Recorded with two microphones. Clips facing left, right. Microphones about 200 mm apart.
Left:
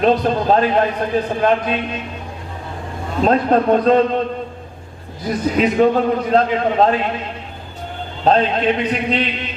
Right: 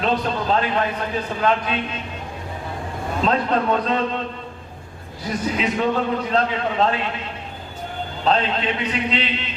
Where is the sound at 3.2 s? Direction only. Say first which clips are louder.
Left 6 dB; 45° left (ahead or behind).